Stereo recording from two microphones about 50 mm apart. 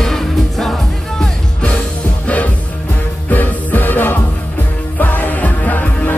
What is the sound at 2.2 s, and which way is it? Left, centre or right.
Music, left.